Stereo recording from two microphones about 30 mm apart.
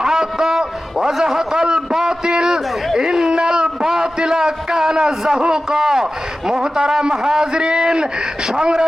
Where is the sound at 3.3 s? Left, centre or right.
Right.